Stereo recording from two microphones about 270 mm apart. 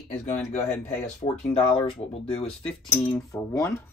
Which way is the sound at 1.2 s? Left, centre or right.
Left.